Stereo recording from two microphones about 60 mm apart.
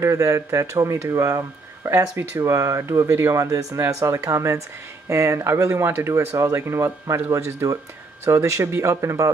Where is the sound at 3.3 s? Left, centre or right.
Right.